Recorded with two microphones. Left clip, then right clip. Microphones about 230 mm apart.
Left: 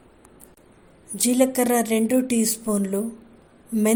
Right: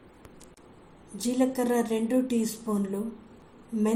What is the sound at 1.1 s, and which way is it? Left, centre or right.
A woman's voice, left.